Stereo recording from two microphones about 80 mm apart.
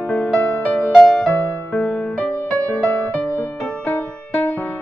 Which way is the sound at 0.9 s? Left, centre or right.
Centre.